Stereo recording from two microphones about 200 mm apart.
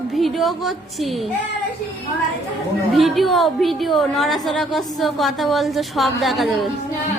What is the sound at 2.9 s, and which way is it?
A woman's voice, centre (ahead or behind).